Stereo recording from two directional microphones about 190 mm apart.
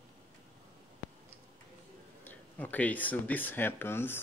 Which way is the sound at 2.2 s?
10° left (ahead or behind).